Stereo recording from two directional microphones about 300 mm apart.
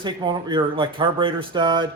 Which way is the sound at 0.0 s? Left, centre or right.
Centre.